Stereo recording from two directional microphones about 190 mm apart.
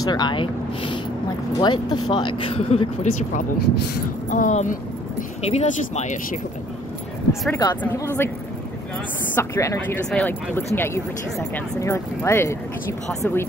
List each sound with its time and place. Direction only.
0.0 s speech: 20° left (ahead or behind)
7.6 s speech: 20° left (ahead or behind)